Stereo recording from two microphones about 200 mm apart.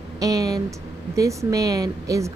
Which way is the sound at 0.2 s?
15° right (ahead or behind).